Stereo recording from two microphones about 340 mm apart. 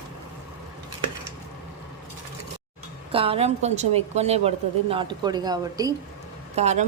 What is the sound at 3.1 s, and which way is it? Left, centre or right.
A woman's voice, centre.